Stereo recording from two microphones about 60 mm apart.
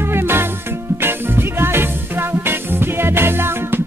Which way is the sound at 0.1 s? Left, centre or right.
Right.